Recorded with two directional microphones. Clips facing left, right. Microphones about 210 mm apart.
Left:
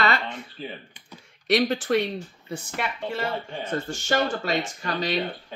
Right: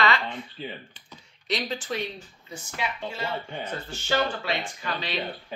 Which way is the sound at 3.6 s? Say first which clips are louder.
Left 5 dB; 50° left (ahead or behind).